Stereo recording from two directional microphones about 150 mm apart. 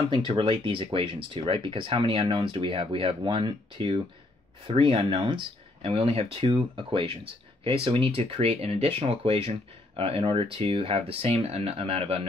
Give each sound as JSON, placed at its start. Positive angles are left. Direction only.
{"t": 0.3, "sound": "speech", "side_deg": -35}